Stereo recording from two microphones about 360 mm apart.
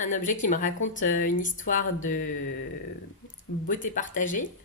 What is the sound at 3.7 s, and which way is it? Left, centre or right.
Speech, left.